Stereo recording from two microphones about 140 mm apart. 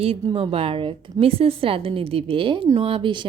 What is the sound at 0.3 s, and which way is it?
A woman's voice, 35° right (ahead or behind).